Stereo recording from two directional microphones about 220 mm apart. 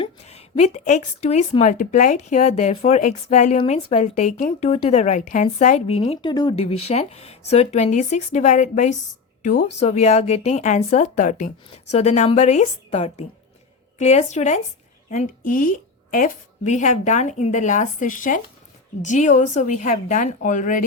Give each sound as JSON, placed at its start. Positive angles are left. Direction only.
{"t": 0.0, "sound": "a woman's voice", "side_deg": 30}